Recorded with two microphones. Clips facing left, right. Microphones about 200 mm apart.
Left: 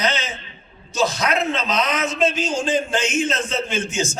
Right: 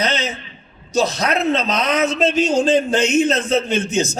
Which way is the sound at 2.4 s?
65° right (ahead or behind).